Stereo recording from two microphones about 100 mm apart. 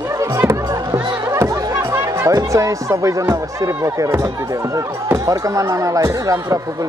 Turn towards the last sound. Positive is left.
turn(degrees=-35)  # may be behind; listen again after turning